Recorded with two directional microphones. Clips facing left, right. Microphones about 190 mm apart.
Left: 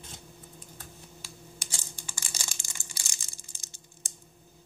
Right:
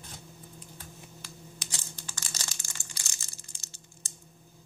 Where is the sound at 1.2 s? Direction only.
10° left (ahead or behind).